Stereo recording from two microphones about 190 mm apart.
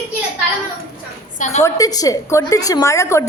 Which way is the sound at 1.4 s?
35° left (ahead or behind).